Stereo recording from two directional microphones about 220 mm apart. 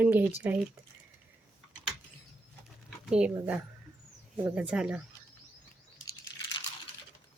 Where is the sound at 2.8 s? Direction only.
Centre (ahead or behind).